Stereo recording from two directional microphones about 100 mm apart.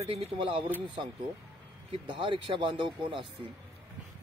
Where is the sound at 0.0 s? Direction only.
90° right.